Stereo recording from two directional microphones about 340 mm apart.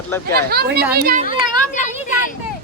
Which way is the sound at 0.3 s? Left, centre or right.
Right.